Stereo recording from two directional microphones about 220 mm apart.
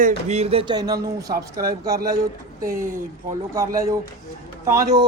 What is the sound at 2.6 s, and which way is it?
Speech, 40° right (ahead or behind).